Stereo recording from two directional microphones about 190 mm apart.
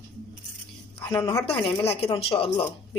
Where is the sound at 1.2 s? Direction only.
20° left (ahead or behind).